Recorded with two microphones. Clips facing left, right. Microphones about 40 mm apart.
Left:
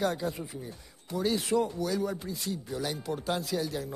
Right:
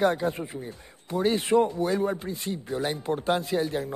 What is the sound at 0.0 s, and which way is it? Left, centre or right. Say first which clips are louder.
Speech: right 6 dB; right.